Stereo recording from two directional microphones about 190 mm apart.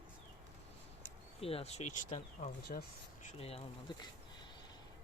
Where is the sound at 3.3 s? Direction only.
30° left (ahead or behind).